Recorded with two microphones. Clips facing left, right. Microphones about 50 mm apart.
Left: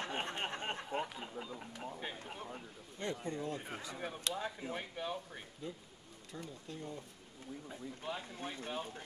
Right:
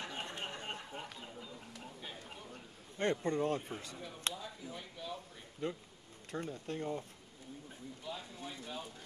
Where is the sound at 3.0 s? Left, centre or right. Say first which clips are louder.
Right 6 dB; right.